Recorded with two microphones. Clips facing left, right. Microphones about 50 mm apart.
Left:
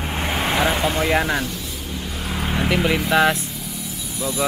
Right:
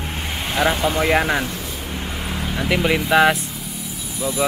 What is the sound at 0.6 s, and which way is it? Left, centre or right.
Speech, centre.